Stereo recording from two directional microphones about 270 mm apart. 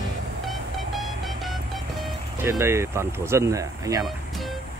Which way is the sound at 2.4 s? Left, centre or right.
Centre.